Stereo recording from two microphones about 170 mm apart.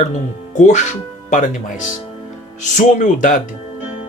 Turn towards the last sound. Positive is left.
turn(degrees=50)  # may be behind; listen again after turning